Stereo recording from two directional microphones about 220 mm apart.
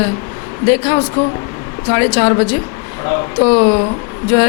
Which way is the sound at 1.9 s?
15° left (ahead or behind).